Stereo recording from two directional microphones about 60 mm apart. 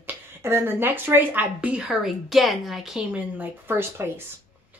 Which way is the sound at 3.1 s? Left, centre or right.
Right.